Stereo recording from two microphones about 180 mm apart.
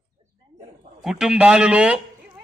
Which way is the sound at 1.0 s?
Centre (ahead or behind).